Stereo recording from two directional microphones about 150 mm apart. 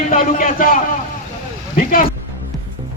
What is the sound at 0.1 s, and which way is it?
A man's voice, 65° left (ahead or behind).